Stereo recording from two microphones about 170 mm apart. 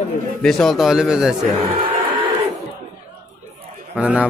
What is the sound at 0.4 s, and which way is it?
Speech, 5° left (ahead or behind).